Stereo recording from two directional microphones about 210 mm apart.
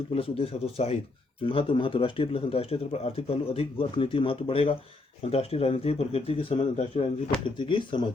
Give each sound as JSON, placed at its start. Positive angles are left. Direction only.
{"t": 0.1, "sound": "speech", "side_deg": 30}